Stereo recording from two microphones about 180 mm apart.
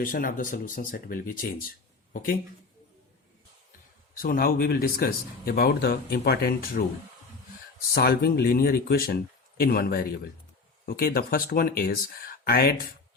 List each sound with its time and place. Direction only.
0.0 s speech: 50° left (ahead or behind)
4.2 s speech: 55° left (ahead or behind)
7.9 s speech: 60° left (ahead or behind)